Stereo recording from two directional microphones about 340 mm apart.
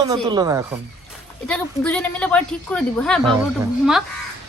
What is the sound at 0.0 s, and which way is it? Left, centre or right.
Speech, centre.